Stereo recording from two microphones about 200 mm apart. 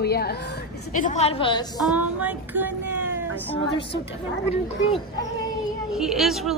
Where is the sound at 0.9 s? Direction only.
35° left (ahead or behind).